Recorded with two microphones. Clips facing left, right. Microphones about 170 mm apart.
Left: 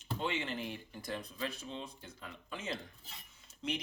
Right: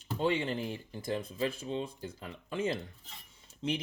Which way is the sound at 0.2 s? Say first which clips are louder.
Right 8 dB; 35° right (ahead or behind).